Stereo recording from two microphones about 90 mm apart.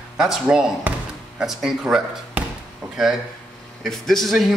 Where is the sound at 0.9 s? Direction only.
20° right (ahead or behind).